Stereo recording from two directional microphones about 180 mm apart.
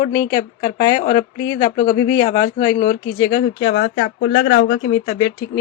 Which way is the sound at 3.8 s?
65° left (ahead or behind).